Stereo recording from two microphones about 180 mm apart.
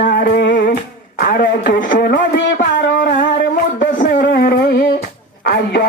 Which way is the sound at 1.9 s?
60° left (ahead or behind).